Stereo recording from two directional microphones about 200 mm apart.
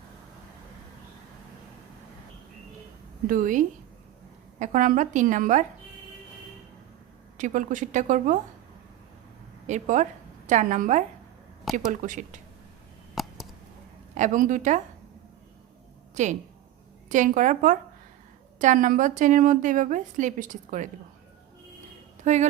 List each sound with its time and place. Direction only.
3.2 s a woman's voice: 40° right (ahead or behind)
7.3 s a woman's voice: 40° right (ahead or behind)
9.6 s a woman's voice: 35° right (ahead or behind)
11.6 s speech: centre (ahead or behind)
11.9 s a woman's voice: 40° right (ahead or behind)
13.1 s a sound: centre (ahead or behind)
14.2 s a woman's voice: 40° right (ahead or behind)
16.2 s a woman's voice: 40° right (ahead or behind)
22.2 s speech: 35° right (ahead or behind)